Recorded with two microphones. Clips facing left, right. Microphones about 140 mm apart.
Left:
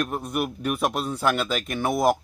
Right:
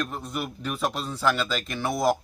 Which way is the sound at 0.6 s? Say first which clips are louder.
Left 2 dB; 10° left (ahead or behind).